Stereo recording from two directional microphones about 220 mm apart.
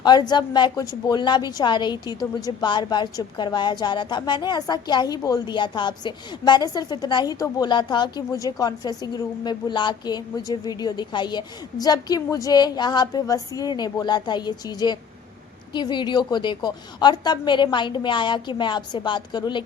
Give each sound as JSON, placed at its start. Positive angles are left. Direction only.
{"t": 0.0, "sound": "a woman's voice", "side_deg": 20}